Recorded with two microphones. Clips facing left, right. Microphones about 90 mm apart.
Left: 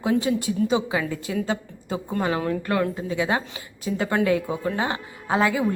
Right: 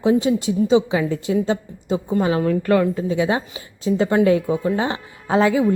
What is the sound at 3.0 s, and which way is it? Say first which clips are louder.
A woman's voice: right 4 dB; 30° right (ahead or behind).